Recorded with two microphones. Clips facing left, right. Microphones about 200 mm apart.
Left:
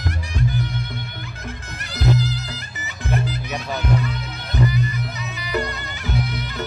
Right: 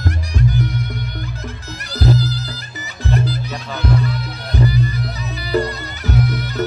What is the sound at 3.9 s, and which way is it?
Music, 35° right (ahead or behind).